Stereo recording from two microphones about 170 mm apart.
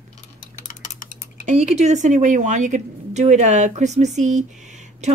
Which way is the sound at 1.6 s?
40° right (ahead or behind).